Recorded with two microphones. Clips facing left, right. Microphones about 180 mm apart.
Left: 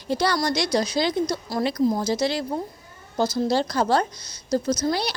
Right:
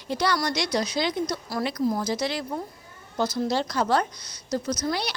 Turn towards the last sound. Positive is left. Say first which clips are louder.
# left 4 dB
turn(degrees=35)  # may be behind; listen again after turning